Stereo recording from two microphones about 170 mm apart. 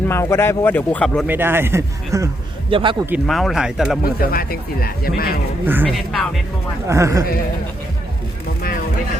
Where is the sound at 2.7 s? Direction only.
30° right (ahead or behind).